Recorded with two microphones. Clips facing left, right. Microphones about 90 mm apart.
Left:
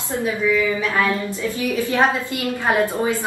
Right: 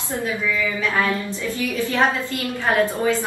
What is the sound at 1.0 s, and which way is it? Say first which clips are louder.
A woman's voice: left 2 dB; 20° left (ahead or behind).